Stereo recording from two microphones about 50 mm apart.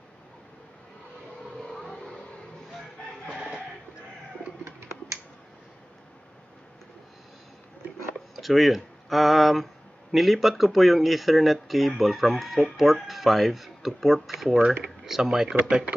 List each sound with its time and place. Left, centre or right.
1.6 s vehicle: centre
4.6 s finger snapping: right
8.4 s speech: centre